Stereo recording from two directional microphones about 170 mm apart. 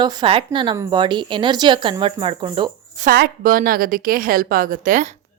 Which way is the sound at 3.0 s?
60° right (ahead or behind).